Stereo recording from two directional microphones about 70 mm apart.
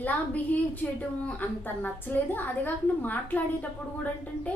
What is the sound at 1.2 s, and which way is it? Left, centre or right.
A woman's voice, left.